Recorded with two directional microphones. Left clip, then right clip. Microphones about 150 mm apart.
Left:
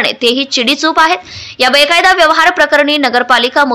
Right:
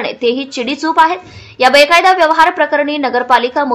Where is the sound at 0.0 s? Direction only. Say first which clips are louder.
Left 4 dB; 20° left (ahead or behind).